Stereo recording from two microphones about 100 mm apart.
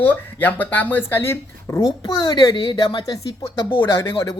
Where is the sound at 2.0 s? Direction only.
40° left (ahead or behind).